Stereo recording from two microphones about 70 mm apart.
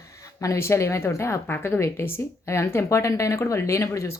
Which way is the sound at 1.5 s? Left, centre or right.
Left.